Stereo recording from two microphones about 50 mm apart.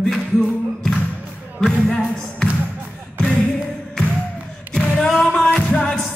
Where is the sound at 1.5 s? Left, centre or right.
Centre.